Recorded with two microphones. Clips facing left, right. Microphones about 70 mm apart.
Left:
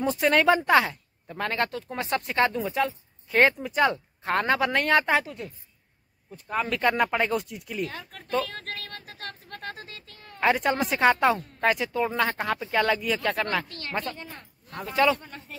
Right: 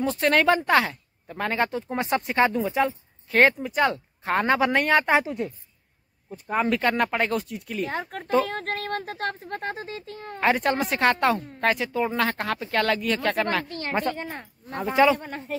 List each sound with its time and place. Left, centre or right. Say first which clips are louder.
0.0 s speech: right 1 dB; centre
5.1 s a woman's voice: right 3 dB; right
6.7 s speech: left 2 dB; centre
7.8 s speech: right 6 dB; right
10.4 s speech: right 1 dB; centre
13.7 s speech: right 6 dB; right
14.1 s speech: right 8 dB; right
14.7 s speech: right 7 dB; right
15.1 s speech: right 8 dB; right